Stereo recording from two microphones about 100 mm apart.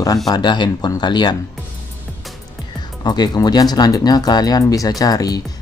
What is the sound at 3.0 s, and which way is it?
Speech, 45° left (ahead or behind).